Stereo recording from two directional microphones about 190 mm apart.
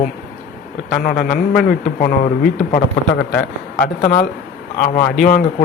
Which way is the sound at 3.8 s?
50° left (ahead or behind).